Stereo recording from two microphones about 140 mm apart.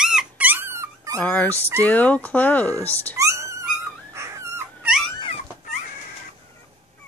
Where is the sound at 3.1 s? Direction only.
20° right (ahead or behind).